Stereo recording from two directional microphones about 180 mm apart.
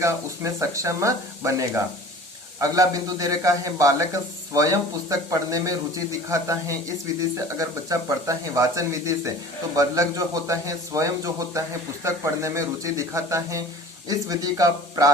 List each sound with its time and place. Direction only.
0.6 s a man's voice: 15° right (ahead or behind)